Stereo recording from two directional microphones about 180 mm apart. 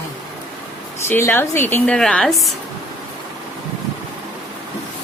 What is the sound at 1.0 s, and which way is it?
A woman's voice, 10° left (ahead or behind).